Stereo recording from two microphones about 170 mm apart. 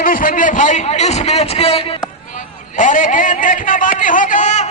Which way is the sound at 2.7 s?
50° left (ahead or behind).